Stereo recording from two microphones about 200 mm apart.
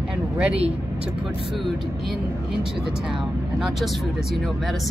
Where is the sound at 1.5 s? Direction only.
Centre (ahead or behind).